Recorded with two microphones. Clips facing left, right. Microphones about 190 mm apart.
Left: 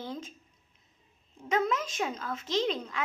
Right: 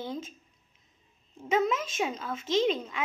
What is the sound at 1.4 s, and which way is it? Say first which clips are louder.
A child's voice: right 2 dB; 5° right (ahead or behind).